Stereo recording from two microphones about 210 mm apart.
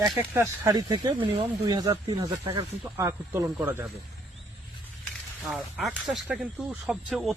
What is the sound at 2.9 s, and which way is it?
Speech, 15° right (ahead or behind).